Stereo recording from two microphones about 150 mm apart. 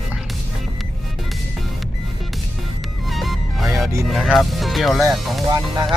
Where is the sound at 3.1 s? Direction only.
Centre (ahead or behind).